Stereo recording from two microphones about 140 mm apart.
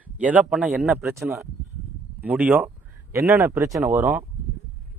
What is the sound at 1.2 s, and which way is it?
A man's voice, 5° right (ahead or behind).